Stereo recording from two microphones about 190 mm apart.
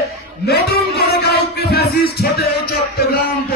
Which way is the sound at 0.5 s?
55° left (ahead or behind).